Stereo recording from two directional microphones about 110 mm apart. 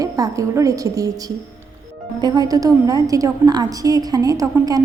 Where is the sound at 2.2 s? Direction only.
40° right (ahead or behind).